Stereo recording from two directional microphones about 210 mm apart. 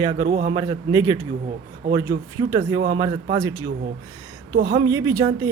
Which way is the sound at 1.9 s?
15° right (ahead or behind).